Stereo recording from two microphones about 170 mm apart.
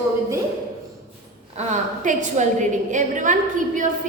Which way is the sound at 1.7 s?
45° right (ahead or behind).